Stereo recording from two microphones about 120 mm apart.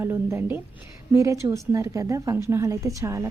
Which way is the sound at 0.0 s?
20° right (ahead or behind).